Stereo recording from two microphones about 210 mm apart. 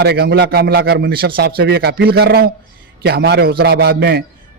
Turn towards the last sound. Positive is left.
turn(degrees=-50)  # may be behind; listen again after turning